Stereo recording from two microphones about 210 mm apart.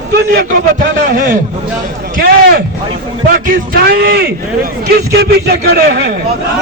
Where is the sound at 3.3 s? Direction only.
45° right (ahead or behind).